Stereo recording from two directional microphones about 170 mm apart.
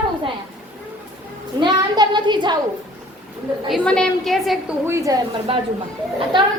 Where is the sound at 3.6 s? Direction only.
Centre (ahead or behind).